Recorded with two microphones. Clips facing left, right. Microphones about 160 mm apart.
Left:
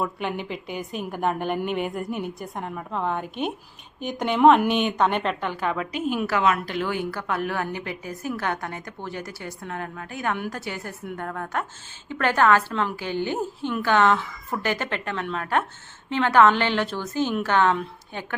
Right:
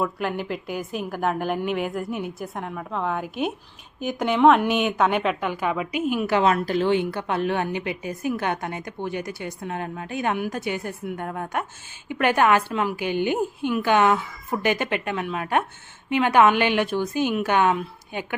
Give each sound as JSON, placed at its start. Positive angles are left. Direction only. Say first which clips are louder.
{"t": 0.0, "sound": "a woman's voice", "louder": "right 2 dB", "side_deg": 0}
{"t": 6.2, "sound": "a woman's voice", "louder": "right 3 dB", "side_deg": -30}